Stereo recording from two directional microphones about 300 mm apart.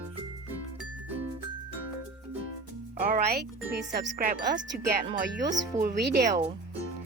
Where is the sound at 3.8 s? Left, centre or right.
Right.